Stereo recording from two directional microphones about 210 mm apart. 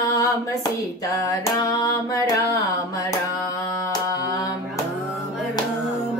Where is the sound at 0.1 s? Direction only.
15° left (ahead or behind).